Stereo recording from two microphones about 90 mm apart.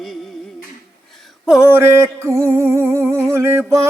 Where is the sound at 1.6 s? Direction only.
30° right (ahead or behind).